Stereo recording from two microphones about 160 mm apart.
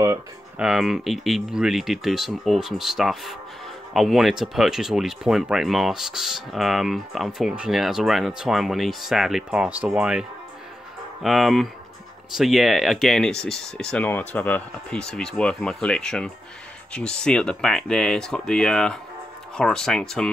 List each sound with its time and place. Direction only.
0.6 s speech: centre (ahead or behind)
11.2 s speech: centre (ahead or behind)